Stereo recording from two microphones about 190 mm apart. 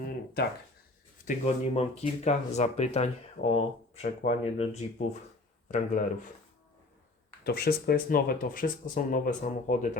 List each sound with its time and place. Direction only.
1.2 s speech: 40° left (ahead or behind)
7.4 s speech: 55° left (ahead or behind)